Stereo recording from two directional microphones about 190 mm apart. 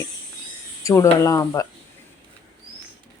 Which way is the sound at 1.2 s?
15° left (ahead or behind).